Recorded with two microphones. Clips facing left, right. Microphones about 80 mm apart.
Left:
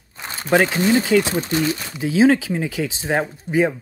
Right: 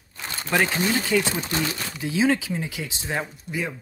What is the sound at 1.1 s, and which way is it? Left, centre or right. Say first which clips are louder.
Speech: left 5 dB; left.